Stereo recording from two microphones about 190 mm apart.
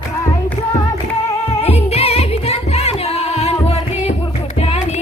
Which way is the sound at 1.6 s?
35° left (ahead or behind).